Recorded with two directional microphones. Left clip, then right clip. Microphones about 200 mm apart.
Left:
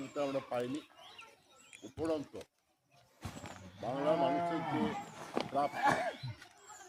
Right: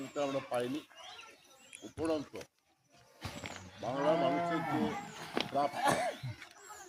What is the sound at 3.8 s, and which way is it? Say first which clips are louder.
Speech: right 1 dB; 5° left (ahead or behind).